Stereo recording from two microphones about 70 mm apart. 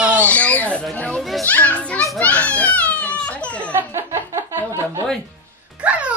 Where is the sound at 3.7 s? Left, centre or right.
Right.